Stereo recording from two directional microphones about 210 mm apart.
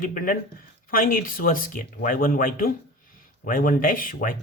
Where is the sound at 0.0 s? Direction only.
40° left (ahead or behind).